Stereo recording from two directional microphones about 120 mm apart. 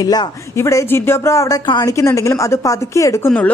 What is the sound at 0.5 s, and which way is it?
A woman's voice, 25° left (ahead or behind).